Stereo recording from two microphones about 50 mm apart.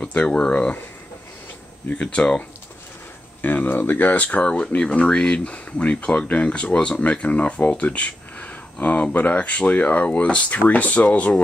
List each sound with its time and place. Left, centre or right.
0.0 s speech: left
1.9 s speech: left
3.4 s speech: left